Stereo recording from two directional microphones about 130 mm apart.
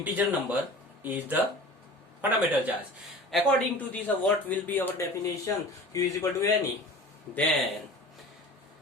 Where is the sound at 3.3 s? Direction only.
5° left (ahead or behind).